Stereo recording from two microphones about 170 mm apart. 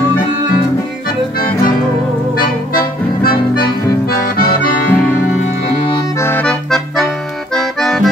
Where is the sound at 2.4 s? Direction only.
60° left (ahead or behind).